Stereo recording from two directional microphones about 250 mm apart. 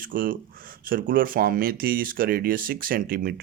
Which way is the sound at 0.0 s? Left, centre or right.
Right.